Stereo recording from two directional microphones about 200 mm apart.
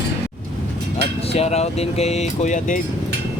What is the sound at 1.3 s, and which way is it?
Speech, 30° left (ahead or behind).